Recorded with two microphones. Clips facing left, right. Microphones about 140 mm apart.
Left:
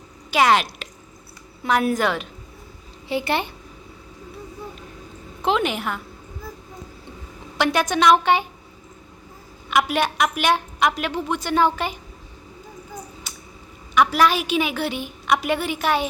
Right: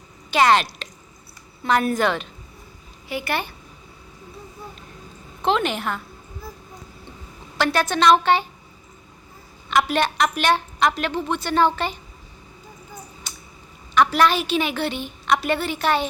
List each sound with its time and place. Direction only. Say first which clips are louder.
0.3 s a woman's voice: right 1 dB; 5° left (ahead or behind)
3.1 s a woman's voice: left 3 dB; 25° left (ahead or behind)
5.4 s a woman's voice: even; 10° left (ahead or behind)
7.6 s a woman's voice: even; 15° left (ahead or behind)
9.6 s a woman's voice: even; 10° left (ahead or behind)
13.3 s a sound: even; 10° left (ahead or behind)
13.9 s a woman's voice: even; 5° left (ahead or behind)